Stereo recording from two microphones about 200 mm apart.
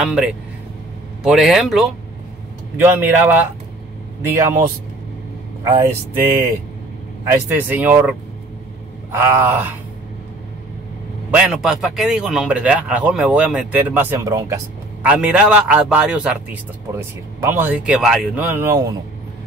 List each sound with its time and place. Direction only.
0.0 s speech: 5° right (ahead or behind)
5.6 s speech: 20° right (ahead or behind)
7.2 s speech: 10° right (ahead or behind)
11.3 s speech: 5° right (ahead or behind)
17.4 s speech: 10° right (ahead or behind)